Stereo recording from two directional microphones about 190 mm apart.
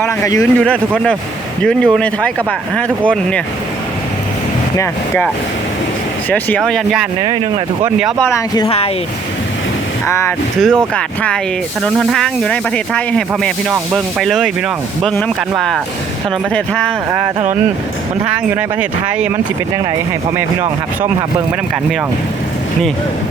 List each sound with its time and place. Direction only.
0.3 s speech: 5° left (ahead or behind)
4.8 s speech: 10° left (ahead or behind)
6.3 s speech: 5° left (ahead or behind)
7.2 s speech: 25° right (ahead or behind)
8.5 s speech: 25° left (ahead or behind)
10.1 s speech: 15° left (ahead or behind)
17.1 s speech: 15° right (ahead or behind)
18.5 s speech: 5° right (ahead or behind)